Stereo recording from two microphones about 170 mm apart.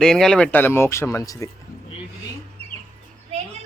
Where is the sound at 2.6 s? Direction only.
35° right (ahead or behind).